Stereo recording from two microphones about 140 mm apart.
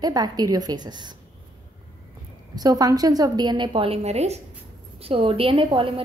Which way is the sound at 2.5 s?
25° right (ahead or behind).